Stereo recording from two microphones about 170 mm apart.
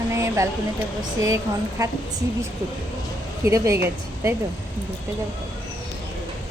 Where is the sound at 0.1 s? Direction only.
20° right (ahead or behind).